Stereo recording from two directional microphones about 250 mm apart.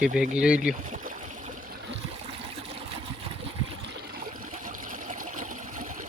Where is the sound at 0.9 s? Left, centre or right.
Right.